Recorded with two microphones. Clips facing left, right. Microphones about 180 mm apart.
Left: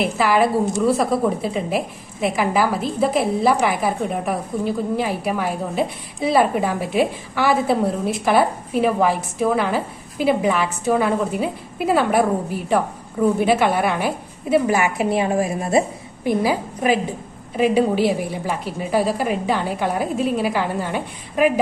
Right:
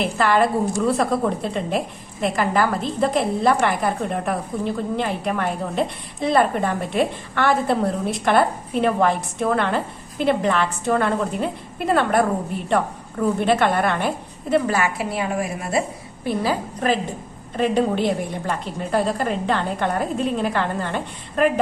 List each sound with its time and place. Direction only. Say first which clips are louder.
0.0 s a woman's voice: left 1 dB; 5° left (ahead or behind); by 15.8 s 25° left (ahead or behind)
16.2 s a woman's voice: left 3 dB; 15° left (ahead or behind)